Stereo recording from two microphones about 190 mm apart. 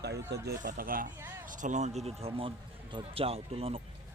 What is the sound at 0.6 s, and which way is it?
Speech, 45° right (ahead or behind).